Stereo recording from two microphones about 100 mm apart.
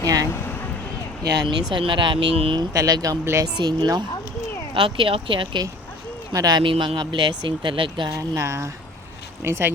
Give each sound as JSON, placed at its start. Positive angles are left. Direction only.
{"t": 0.0, "sound": "vehicle", "side_deg": -35}
{"t": 1.2, "sound": "speech", "side_deg": -55}
{"t": 2.3, "sound": "speech", "side_deg": -75}
{"t": 2.6, "sound": "speech", "side_deg": -40}
{"t": 3.4, "sound": "speech", "side_deg": -45}
{"t": 4.7, "sound": "speech", "side_deg": -60}
{"t": 6.3, "sound": "speech", "side_deg": -40}
{"t": 6.6, "sound": "speech", "side_deg": -55}
{"t": 8.1, "sound": "speech", "side_deg": -30}